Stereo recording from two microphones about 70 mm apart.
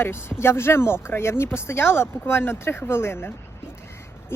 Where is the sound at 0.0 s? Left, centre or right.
Left.